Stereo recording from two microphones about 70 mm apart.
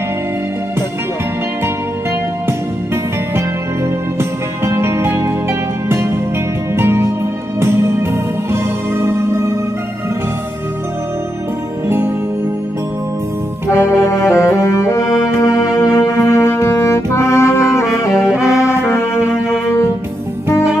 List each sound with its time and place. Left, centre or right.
3.3 s music: right
13.7 s brass instrument: left
17.9 s saxophone: left
18.6 s music: left